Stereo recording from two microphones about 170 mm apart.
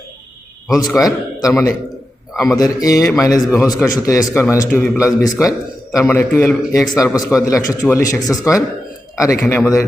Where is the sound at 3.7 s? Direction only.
Centre (ahead or behind).